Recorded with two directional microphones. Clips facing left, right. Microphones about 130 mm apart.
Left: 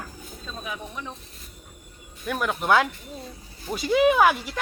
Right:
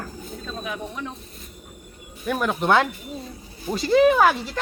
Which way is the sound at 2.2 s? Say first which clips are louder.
Right 3 dB; 5° right (ahead or behind).